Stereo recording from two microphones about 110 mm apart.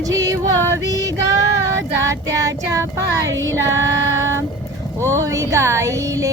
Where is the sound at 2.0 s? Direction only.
30° right (ahead or behind).